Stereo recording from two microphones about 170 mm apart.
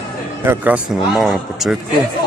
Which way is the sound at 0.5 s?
10° right (ahead or behind).